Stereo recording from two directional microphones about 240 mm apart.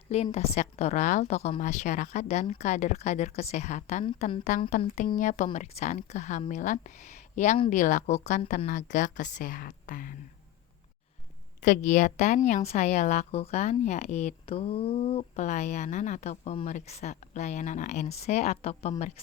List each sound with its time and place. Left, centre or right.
0.1 s a woman's voice: left
11.6 s a woman's voice: left